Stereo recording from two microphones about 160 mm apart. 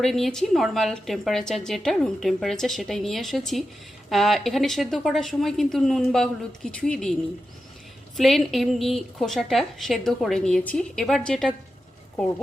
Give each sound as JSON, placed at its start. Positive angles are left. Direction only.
{"t": 0.0, "sound": "a woman's voice", "side_deg": 5}
{"t": 8.1, "sound": "a woman's voice", "side_deg": 0}